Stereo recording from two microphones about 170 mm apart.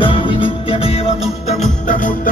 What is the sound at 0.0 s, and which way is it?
Music, 30° left (ahead or behind).